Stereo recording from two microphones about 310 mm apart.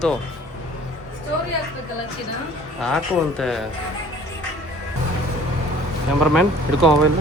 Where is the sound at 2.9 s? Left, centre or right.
Centre.